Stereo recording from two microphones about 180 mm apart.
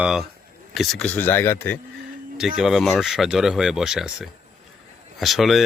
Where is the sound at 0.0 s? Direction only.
5° right (ahead or behind).